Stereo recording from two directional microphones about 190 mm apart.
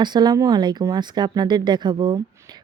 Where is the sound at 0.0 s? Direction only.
20° right (ahead or behind).